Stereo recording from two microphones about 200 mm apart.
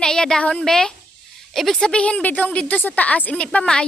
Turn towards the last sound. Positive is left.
turn(degrees=5)  # may be behind; listen again after turning